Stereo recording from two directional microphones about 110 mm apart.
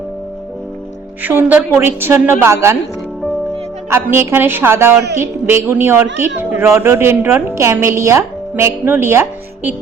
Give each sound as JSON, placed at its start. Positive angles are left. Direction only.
{"t": 1.2, "sound": "a woman's voice", "side_deg": -15}
{"t": 3.8, "sound": "a woman's voice", "side_deg": -25}